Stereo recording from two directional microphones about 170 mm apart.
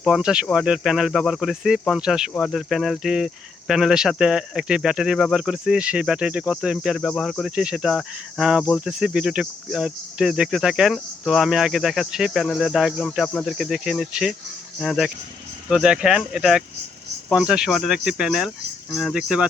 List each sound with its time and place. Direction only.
0.0 s speech: 5° right (ahead or behind)